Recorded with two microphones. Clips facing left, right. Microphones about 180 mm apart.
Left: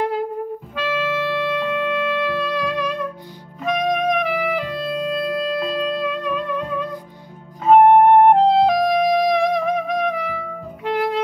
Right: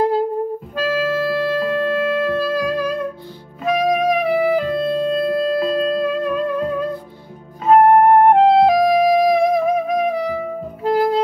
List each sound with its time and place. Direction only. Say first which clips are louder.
0.7 s music: right 3 dB; 35° right (ahead or behind)
3.6 s music: right 3 dB; 5° right (ahead or behind)
4.3 s music: right 6 dB; 30° right (ahead or behind)
7.6 s music: even; centre (ahead or behind)
10.8 s music: right 4 dB; 35° right (ahead or behind)